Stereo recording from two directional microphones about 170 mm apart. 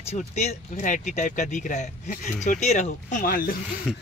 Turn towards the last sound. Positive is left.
turn(degrees=-5)  # may be behind; listen again after turning